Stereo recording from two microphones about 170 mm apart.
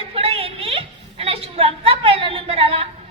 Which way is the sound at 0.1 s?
35° right (ahead or behind).